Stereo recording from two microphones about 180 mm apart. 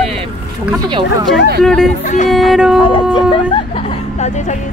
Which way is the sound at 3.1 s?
25° left (ahead or behind).